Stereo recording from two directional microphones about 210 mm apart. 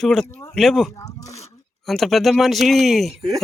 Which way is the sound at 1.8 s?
Centre (ahead or behind).